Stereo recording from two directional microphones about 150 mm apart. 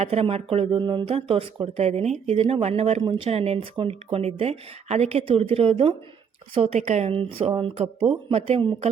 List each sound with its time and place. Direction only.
0.0 s speech: 40° right (ahead or behind)